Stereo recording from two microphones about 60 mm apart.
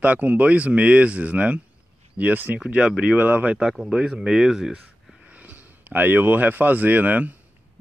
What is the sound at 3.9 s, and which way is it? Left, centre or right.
Speech, centre.